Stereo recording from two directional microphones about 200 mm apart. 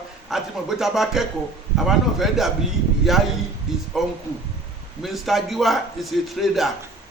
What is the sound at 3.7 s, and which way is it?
Speech, centre (ahead or behind).